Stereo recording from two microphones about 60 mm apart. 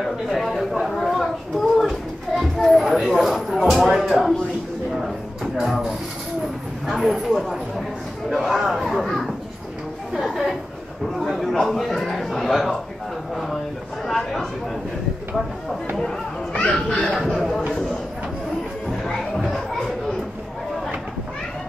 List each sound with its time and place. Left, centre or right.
0.0 s a sound: centre
6.9 s a man's voice: centre
14.0 s a man's voice: centre
16.0 s chatter: centre
17.3 s speech: centre
18.9 s music: centre